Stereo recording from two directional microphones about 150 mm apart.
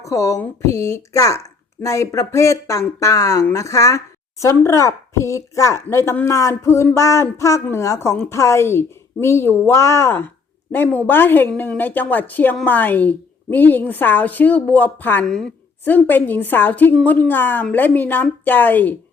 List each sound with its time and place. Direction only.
0.0 s a woman's voice: 20° left (ahead or behind)